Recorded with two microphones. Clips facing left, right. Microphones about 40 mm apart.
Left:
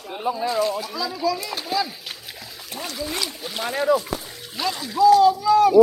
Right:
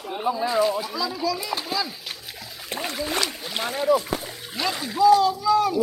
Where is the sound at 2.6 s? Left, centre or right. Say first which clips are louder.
Right 2 dB; right.